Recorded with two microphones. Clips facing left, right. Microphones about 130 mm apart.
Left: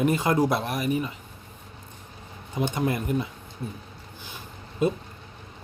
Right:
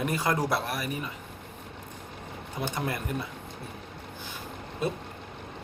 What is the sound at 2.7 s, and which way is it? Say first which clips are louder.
Speech: left 5 dB; 20° left (ahead or behind).